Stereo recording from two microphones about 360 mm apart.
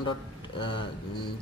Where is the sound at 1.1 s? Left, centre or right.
Left.